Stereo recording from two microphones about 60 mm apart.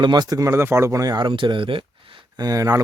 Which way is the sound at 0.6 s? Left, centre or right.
Right.